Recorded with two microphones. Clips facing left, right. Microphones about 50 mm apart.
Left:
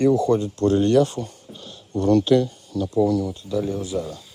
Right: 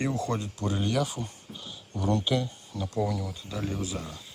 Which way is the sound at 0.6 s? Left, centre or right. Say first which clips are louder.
Left 12 dB; centre.